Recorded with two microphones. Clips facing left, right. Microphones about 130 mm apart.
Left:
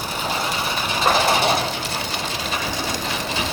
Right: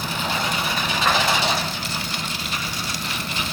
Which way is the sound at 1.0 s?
35° left (ahead or behind).